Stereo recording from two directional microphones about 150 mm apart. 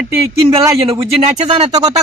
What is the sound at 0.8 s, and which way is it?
Speech, 40° right (ahead or behind).